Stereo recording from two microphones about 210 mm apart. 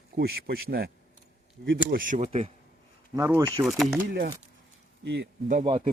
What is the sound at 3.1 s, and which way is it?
Speech, 15° right (ahead or behind).